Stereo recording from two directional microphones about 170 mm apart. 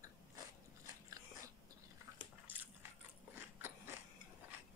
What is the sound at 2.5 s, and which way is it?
Biting, 10° right (ahead or behind).